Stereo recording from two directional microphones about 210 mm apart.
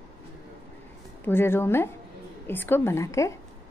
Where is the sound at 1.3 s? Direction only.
10° left (ahead or behind).